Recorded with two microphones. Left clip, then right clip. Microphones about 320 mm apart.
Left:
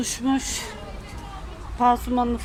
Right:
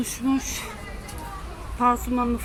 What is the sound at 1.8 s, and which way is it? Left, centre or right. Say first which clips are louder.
Speech: left 2 dB; centre.